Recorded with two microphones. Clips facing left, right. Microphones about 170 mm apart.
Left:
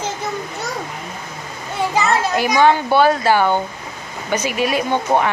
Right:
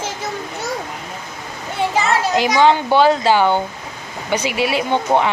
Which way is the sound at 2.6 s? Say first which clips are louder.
Even; 15° right (ahead or behind).